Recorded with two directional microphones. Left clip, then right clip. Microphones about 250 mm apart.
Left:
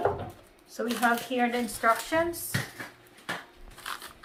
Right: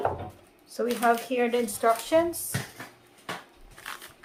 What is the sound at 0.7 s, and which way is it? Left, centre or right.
Speech, right.